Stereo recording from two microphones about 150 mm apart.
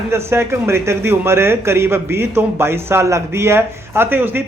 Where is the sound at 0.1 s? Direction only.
15° right (ahead or behind).